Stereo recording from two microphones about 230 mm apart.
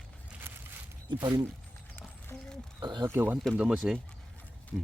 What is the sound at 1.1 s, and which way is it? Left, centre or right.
Speech, centre.